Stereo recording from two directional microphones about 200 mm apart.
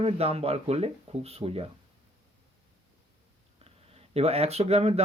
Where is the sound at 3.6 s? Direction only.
30° right (ahead or behind).